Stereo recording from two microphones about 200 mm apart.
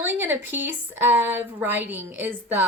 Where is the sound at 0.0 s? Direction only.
10° right (ahead or behind).